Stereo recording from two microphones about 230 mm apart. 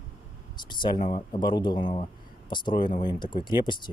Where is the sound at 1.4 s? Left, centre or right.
Centre.